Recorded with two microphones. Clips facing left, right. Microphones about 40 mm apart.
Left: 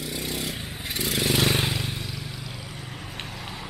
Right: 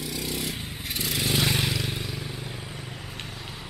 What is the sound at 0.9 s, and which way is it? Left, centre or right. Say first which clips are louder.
Vehicle: left 2 dB; left.